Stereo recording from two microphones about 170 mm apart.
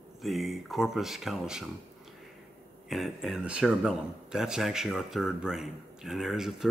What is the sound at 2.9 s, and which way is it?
A man's voice, centre (ahead or behind).